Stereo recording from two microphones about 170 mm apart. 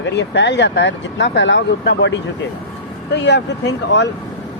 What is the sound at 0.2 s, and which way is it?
Speech, 90° left.